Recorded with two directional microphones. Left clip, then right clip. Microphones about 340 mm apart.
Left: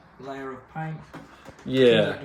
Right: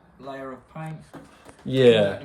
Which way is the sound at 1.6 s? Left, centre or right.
Right.